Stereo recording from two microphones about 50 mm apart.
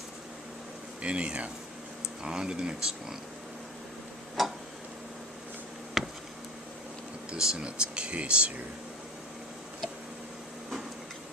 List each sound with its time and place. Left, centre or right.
1.0 s speech: right
4.4 s tick-tock: centre
6.0 s a sound: centre
7.3 s speech: centre